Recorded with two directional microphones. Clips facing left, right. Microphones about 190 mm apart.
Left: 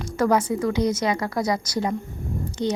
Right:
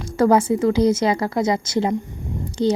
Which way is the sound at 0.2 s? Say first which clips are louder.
Right 5 dB; 30° right (ahead or behind).